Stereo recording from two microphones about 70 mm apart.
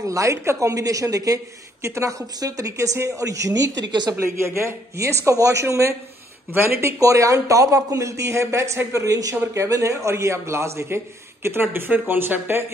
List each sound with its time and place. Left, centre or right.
0.0 s a woman's voice: right
4.2 s a woman's voice: right